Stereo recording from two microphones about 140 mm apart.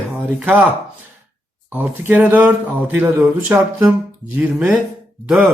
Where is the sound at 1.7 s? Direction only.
15° right (ahead or behind).